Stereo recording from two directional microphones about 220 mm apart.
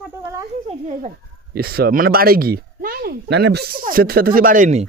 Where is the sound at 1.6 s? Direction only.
45° right (ahead or behind).